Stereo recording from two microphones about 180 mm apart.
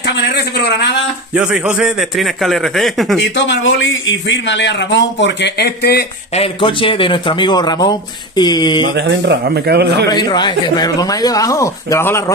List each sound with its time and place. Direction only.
0.0 s a sound: 70° left (ahead or behind)
1.3 s a man's voice: 5° right (ahead or behind)
3.2 s a man's voice: 85° left; by 6.0 s 60° left (ahead or behind)
6.3 s speech: 30° left (ahead or behind)
8.9 s a man's voice: 70° right (ahead or behind)
10.0 s speech: 25° left (ahead or behind)